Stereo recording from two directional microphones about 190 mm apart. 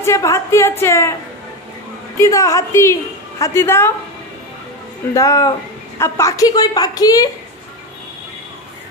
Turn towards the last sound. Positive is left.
turn(degrees=20)  # may be behind; listen again after turning